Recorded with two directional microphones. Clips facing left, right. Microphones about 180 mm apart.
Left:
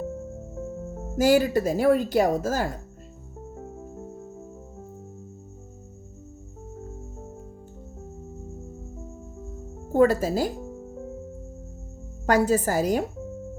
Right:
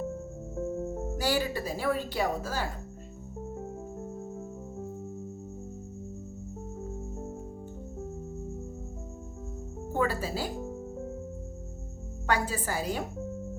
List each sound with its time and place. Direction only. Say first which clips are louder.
1.2 s a woman's voice: left 11 dB; 45° left (ahead or behind)
9.9 s a woman's voice: left 10 dB; 40° left (ahead or behind)
12.2 s a woman's voice: left 9 dB; 40° left (ahead or behind)